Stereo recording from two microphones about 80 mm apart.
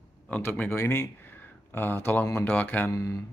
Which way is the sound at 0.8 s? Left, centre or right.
Left.